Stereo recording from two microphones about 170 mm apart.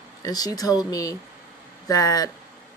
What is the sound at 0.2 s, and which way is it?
Speech, 20° left (ahead or behind).